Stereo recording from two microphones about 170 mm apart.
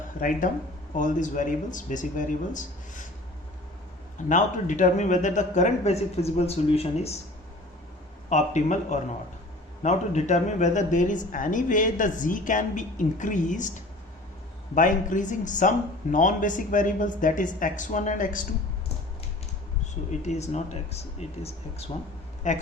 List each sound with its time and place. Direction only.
0.2 s speech: 50° left (ahead or behind)
4.3 s speech: 45° left (ahead or behind)
8.3 s speech: 45° left (ahead or behind)
14.8 s speech: 50° left (ahead or behind)
20.1 s speech: 40° left (ahead or behind)